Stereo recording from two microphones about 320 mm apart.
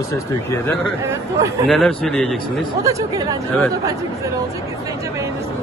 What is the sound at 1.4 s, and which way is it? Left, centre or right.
Speech, centre.